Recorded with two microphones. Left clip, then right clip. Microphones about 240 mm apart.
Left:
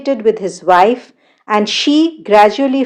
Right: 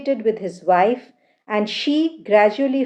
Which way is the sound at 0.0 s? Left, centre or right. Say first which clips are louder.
Left 7 dB; left.